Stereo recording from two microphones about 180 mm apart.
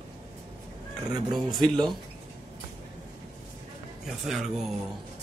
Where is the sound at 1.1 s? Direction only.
25° right (ahead or behind).